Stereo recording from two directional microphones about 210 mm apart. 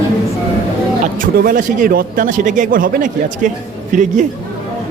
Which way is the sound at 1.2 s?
40° right (ahead or behind).